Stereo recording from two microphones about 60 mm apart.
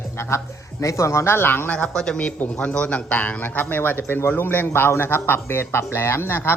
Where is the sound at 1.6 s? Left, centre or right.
Centre.